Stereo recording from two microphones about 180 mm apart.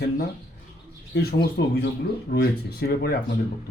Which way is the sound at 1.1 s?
60° left (ahead or behind).